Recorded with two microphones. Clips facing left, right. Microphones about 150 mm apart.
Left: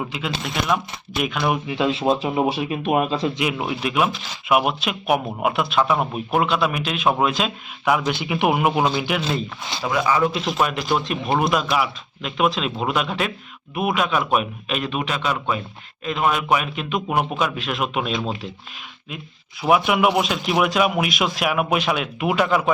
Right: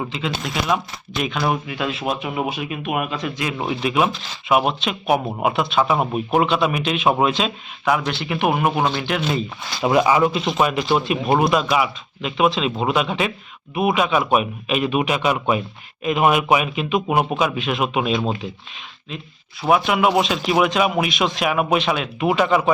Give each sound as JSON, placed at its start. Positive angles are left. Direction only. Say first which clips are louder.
{"t": 0.0, "sound": "speech", "louder": "right 2 dB", "side_deg": 5}
{"t": 1.6, "sound": "speech", "louder": "left 4 dB", "side_deg": 25}
{"t": 3.6, "sound": "speech", "louder": "right 4 dB", "side_deg": 5}
{"t": 8.1, "sound": "speech", "louder": "even", "side_deg": 15}
{"t": 9.8, "sound": "speech", "louder": "right 4 dB", "side_deg": -20}
{"t": 10.2, "sound": "speech", "louder": "right 2 dB", "side_deg": 0}
{"t": 19.6, "sound": "speech", "louder": "even", "side_deg": 5}